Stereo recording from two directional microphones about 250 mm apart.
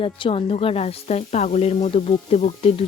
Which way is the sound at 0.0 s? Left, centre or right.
Left.